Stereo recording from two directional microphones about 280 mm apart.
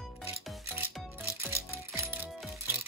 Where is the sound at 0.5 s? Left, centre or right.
Centre.